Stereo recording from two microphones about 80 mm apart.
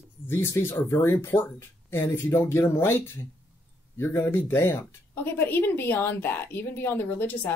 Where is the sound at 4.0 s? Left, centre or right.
Left.